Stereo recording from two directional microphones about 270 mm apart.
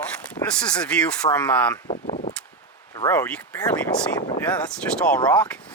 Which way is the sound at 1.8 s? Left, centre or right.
Left.